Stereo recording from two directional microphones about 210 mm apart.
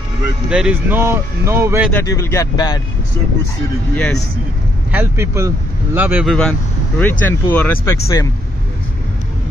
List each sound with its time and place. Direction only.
0.5 s a man's voice: 5° right (ahead or behind)
1.9 s speech: 10° left (ahead or behind)
3.9 s speech: 5° left (ahead or behind)
4.9 s a man's voice: 10° right (ahead or behind); by 8.3 s 15° left (ahead or behind)